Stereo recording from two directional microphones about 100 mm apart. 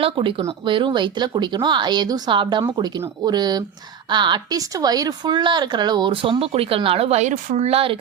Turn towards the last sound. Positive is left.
turn(degrees=-70)  # may be behind; listen again after turning